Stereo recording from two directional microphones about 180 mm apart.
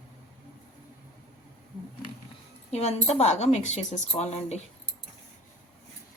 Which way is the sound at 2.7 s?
35° left (ahead or behind).